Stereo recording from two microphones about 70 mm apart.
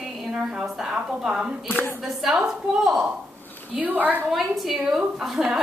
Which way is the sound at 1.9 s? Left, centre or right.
Centre.